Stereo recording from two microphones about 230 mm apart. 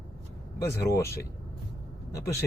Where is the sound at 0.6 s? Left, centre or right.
Centre.